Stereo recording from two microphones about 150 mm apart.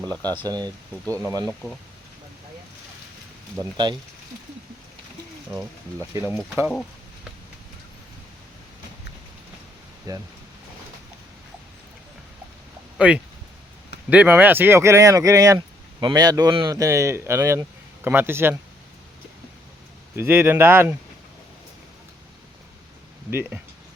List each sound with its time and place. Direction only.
0.0 s speech: 10° left (ahead or behind)
0.3 s speech: 25° right (ahead or behind)
3.6 s speech: 30° right (ahead or behind)
6.0 s speech: 15° right (ahead or behind)
10.1 s speech: 25° right (ahead or behind)
13.0 s speech: 10° right (ahead or behind)
20.1 s speech: 15° right (ahead or behind)
23.3 s speech: 15° right (ahead or behind)